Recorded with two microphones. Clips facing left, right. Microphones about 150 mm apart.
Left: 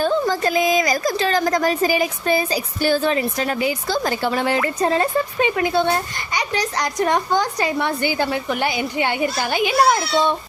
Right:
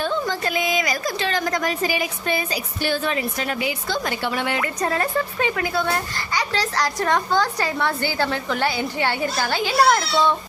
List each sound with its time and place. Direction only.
0.0 s a woman's voice: 40° left (ahead or behind); by 10.3 s 20° left (ahead or behind)